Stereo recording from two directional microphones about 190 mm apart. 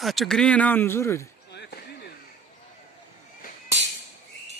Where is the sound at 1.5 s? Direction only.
60° left (ahead or behind).